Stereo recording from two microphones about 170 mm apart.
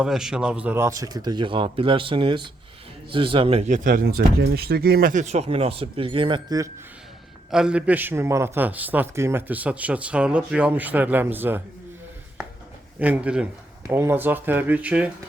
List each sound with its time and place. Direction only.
0.0 s speech: 5° right (ahead or behind); by 3.8 s 35° right (ahead or behind)
3.8 s speech: 60° right (ahead or behind); by 6.7 s 25° right (ahead or behind)
7.5 s a man's voice: 5° right (ahead or behind)
13.0 s a man's voice: 10° right (ahead or behind)